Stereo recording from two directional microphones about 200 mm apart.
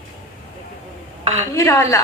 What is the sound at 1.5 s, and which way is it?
Speech, 15° left (ahead or behind).